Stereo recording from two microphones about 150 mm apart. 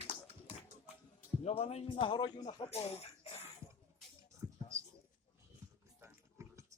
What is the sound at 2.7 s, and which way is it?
Cough, 45° left (ahead or behind).